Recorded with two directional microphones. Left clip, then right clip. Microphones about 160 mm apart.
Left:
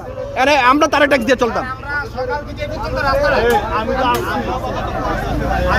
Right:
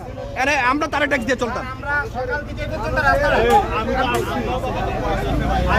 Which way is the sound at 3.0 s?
5° left (ahead or behind).